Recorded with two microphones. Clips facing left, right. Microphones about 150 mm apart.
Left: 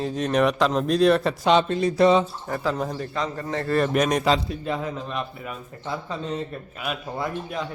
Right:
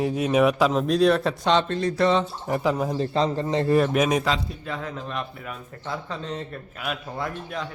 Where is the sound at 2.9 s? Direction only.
30° right (ahead or behind).